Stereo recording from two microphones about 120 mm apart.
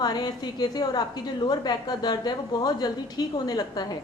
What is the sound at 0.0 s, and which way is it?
A woman's voice, 35° left (ahead or behind).